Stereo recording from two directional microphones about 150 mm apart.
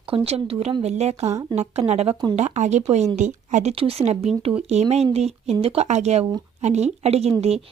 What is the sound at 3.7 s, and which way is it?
A woman's voice, 40° right (ahead or behind).